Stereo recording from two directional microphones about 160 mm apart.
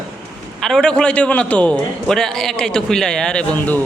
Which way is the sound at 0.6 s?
5° left (ahead or behind).